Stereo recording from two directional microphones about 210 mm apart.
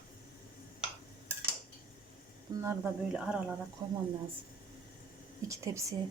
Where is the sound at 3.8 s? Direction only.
20° right (ahead or behind).